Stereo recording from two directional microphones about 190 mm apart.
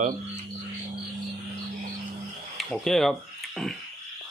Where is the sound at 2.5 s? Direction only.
Centre (ahead or behind).